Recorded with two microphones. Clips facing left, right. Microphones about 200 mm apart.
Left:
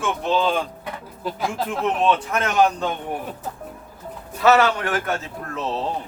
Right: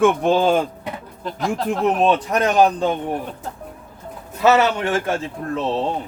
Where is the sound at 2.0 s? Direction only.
35° right (ahead or behind).